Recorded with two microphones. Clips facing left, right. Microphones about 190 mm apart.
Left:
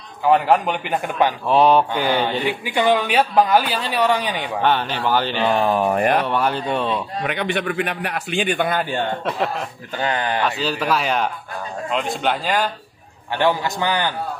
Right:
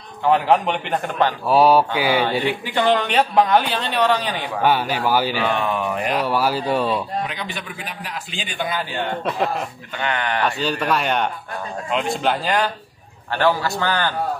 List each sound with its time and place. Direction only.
0.2 s a man's voice: 5° left (ahead or behind)
1.5 s a man's voice: 5° right (ahead or behind)
2.2 s speech: 15° left (ahead or behind)
4.6 s a man's voice: 10° right (ahead or behind)
5.4 s speech: 35° left (ahead or behind)
6.2 s a man's voice: 5° right (ahead or behind)
7.2 s a man's voice: 65° left (ahead or behind)
9.2 s a man's voice: centre (ahead or behind)
9.9 s speech: 35° left (ahead or behind)
10.4 s a man's voice: centre (ahead or behind)
13.3 s speech: 15° left (ahead or behind)